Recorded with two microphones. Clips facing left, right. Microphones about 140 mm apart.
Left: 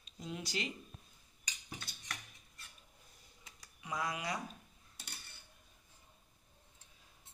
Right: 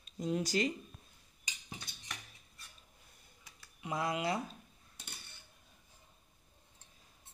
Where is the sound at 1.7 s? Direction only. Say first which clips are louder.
Left 1 dB; 20° right (ahead or behind).